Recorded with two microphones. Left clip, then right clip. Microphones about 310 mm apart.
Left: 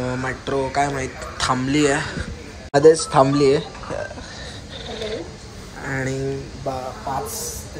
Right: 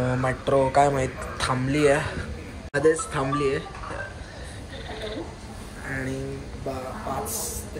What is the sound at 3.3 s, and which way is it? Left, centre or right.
Speech, centre.